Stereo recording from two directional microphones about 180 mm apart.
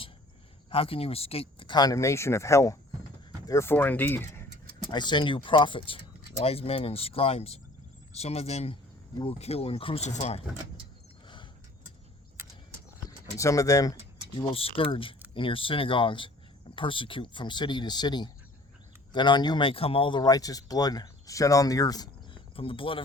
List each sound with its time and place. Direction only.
0.7 s speech: 30° left (ahead or behind); by 4.4 s 10° left (ahead or behind)
4.9 s speech: 25° left (ahead or behind)
13.4 s speech: 20° left (ahead or behind)
14.3 s speech: 30° left (ahead or behind)